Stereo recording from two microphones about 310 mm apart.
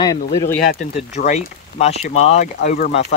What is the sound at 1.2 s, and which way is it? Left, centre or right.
Speech, left.